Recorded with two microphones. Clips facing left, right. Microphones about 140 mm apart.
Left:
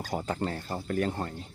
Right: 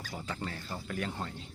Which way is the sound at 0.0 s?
40° left (ahead or behind).